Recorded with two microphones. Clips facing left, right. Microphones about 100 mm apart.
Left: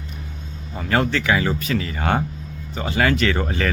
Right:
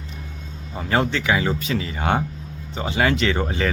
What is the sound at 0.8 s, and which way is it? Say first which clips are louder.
Speech: left 1 dB; 20° right (ahead or behind).